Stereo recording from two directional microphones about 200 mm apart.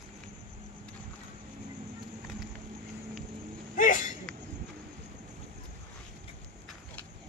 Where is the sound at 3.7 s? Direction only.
40° left (ahead or behind).